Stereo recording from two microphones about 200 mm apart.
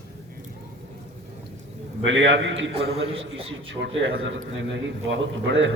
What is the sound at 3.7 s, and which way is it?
A man's voice, 70° right (ahead or behind).